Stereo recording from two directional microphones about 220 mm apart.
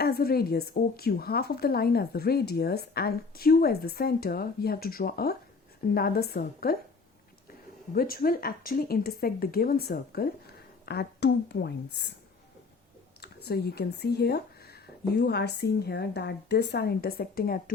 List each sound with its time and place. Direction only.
0.0 s speech: 45° left (ahead or behind)
7.9 s speech: 40° left (ahead or behind)
13.2 s speech: 45° left (ahead or behind)